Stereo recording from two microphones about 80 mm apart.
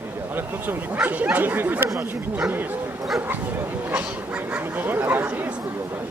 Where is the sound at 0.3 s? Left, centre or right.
Right.